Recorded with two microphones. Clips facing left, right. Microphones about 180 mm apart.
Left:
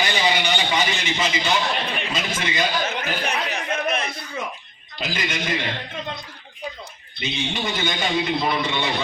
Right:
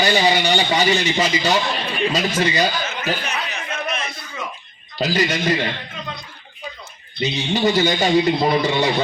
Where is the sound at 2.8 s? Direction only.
60° left (ahead or behind).